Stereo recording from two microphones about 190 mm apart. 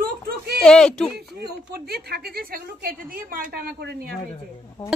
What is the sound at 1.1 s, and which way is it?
A woman's voice, 55° right (ahead or behind).